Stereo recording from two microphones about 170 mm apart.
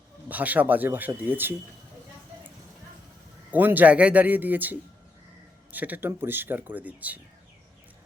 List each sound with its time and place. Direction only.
0.3 s speech: 10° right (ahead or behind)
3.5 s speech: 10° right (ahead or behind)